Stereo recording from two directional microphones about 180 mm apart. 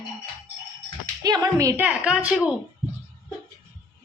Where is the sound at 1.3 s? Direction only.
20° right (ahead or behind).